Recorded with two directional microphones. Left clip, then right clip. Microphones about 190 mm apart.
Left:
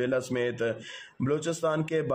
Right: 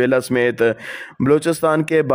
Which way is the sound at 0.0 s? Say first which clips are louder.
Right 12 dB; 45° right (ahead or behind).